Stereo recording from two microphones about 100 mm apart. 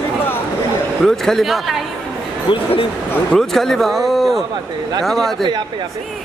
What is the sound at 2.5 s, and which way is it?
Speech, 65° left (ahead or behind).